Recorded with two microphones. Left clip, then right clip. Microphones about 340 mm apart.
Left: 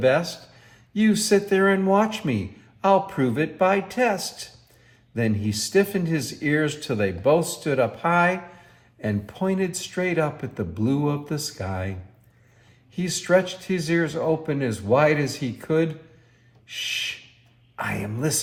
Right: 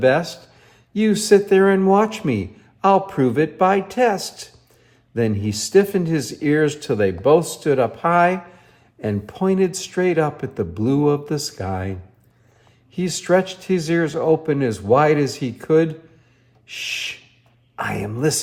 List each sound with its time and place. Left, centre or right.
0.1 s speech: right
13.1 s speech: right